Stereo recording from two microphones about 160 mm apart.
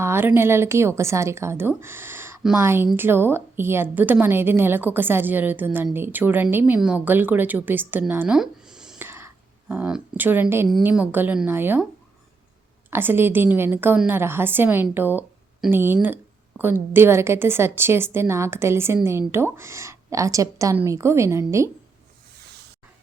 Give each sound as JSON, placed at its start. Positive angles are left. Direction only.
{"t": 0.0, "sound": "a woman's voice", "side_deg": -15}
{"t": 12.9, "sound": "a woman's voice", "side_deg": -15}